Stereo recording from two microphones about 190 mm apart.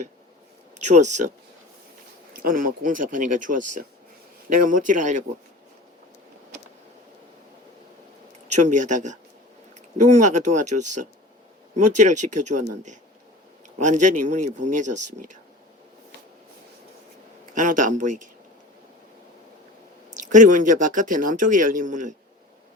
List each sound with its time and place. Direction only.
0.8 s speech: 40° right (ahead or behind)
2.3 s speech: 45° right (ahead or behind)
8.5 s speech: 40° right (ahead or behind)
17.5 s speech: 45° right (ahead or behind)
20.2 s speech: 40° right (ahead or behind)